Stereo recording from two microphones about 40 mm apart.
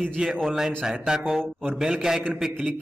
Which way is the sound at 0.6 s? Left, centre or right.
Centre.